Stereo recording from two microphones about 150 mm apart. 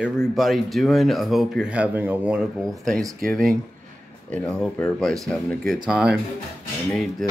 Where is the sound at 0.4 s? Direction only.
Centre (ahead or behind).